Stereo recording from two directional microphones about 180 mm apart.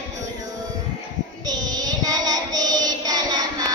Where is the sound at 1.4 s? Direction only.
20° right (ahead or behind).